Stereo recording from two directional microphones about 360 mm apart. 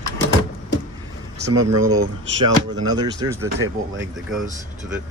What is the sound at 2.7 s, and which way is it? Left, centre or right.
Speech, centre.